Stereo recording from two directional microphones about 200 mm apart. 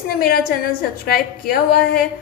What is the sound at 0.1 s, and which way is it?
A woman's voice, 50° left (ahead or behind).